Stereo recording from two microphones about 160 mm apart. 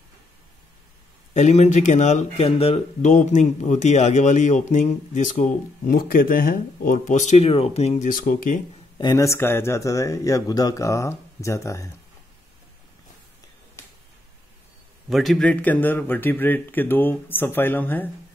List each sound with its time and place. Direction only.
1.3 s speech: 45° left (ahead or behind)
8.1 s speech: 55° left (ahead or behind)
8.9 s speech: 25° left (ahead or behind)
15.0 s speech: centre (ahead or behind)